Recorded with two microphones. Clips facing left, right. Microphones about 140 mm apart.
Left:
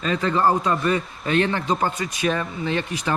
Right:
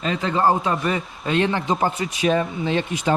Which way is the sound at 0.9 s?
20° right (ahead or behind).